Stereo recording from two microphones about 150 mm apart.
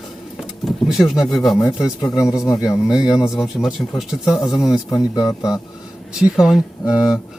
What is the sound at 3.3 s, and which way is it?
Speech, centre (ahead or behind).